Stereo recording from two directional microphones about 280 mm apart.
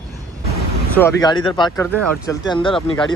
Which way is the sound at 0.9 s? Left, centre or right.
Centre.